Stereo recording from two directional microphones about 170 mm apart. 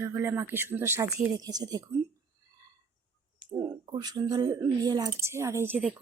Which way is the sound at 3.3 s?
25° right (ahead or behind).